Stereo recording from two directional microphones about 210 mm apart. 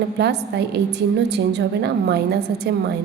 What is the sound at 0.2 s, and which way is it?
A woman's voice, 55° right (ahead or behind).